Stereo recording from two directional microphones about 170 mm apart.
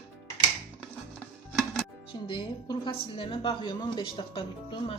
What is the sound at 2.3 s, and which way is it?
A woman's voice, 25° left (ahead or behind).